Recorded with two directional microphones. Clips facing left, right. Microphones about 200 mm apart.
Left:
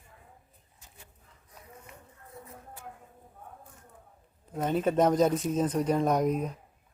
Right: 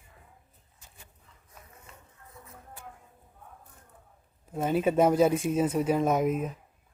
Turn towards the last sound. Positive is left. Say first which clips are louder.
# even
turn(degrees=-5)  # may be behind; listen again after turning